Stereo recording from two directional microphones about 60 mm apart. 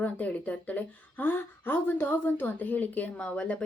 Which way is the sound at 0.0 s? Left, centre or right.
Left.